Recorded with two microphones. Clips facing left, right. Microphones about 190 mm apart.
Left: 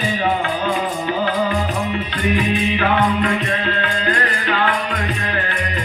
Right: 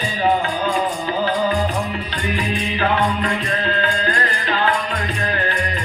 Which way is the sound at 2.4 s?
35° right (ahead or behind).